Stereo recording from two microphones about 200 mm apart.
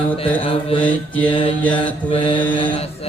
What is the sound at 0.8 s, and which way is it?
Mantra, 5° left (ahead or behind).